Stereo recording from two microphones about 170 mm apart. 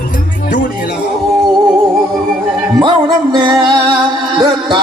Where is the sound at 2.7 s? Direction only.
25° right (ahead or behind).